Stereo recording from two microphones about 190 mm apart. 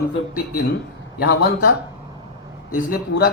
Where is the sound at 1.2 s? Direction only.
60° left (ahead or behind).